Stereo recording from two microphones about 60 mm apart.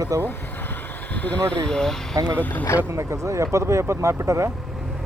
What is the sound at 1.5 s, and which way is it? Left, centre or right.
Speech, centre.